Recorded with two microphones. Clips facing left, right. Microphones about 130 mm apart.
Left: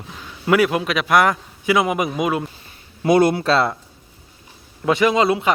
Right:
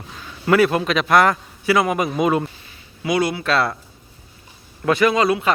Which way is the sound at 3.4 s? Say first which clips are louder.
Left 2 dB; 25° left (ahead or behind).